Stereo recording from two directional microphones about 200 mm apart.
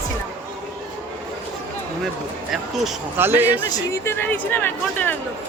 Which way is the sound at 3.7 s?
15° left (ahead or behind).